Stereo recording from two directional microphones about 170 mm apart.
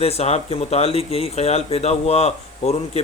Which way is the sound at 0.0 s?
35° left (ahead or behind).